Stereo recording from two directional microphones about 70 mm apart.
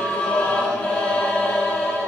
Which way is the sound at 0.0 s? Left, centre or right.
Centre.